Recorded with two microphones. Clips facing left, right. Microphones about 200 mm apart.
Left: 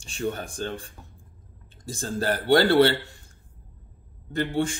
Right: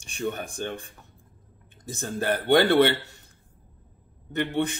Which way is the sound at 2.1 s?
20° right (ahead or behind).